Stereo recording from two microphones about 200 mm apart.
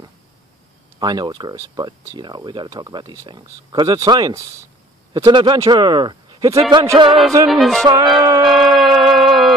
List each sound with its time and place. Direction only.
0.9 s speech: 20° right (ahead or behind)
7.1 s music: centre (ahead or behind)
7.8 s music: 20° right (ahead or behind)
8.5 s music: centre (ahead or behind)